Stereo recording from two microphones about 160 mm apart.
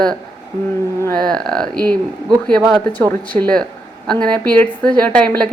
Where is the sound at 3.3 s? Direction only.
5° left (ahead or behind).